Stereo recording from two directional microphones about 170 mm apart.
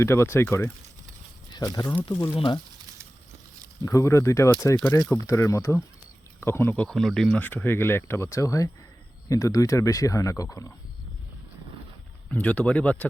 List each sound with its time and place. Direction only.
0.0 s speech: 15° left (ahead or behind)
2.3 s speech: 30° left (ahead or behind)
3.8 s speech: 15° left (ahead or behind)
6.8 s speech: centre (ahead or behind); by 10.7 s 20° left (ahead or behind)
12.3 s speech: 10° left (ahead or behind)